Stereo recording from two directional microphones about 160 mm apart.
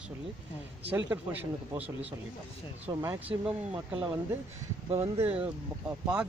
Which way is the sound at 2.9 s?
20° right (ahead or behind).